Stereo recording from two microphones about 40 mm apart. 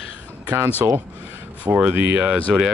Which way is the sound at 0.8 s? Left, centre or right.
Right.